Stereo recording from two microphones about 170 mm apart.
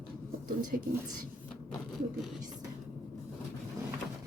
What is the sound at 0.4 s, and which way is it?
Speech, 55° right (ahead or behind).